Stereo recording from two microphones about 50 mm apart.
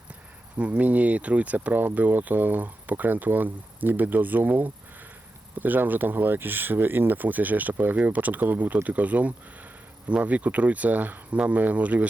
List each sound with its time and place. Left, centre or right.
0.8 s speech: right